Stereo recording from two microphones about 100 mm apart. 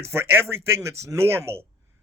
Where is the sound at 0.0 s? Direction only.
25° right (ahead or behind).